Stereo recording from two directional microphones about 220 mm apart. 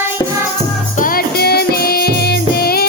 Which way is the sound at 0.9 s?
40° left (ahead or behind).